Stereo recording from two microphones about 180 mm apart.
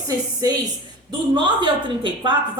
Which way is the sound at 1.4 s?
25° right (ahead or behind).